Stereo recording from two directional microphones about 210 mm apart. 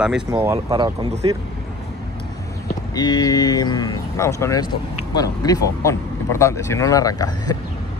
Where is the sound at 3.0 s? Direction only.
20° left (ahead or behind).